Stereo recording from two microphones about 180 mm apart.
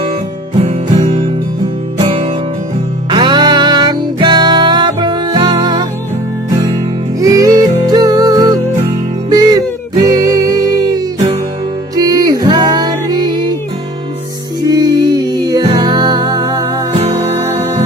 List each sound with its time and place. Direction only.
0.6 s music: 35° right (ahead or behind)
3.1 s music: 25° right (ahead or behind)
7.2 s music: 20° right (ahead or behind)
14.6 s music: 20° right (ahead or behind)